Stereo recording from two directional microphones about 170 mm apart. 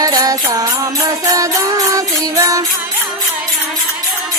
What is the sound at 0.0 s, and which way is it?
Music, 20° right (ahead or behind).